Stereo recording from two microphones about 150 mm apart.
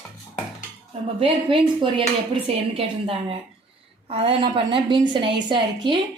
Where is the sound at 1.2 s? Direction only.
40° right (ahead or behind).